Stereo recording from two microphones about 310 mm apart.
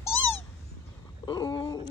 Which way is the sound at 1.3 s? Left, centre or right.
Centre.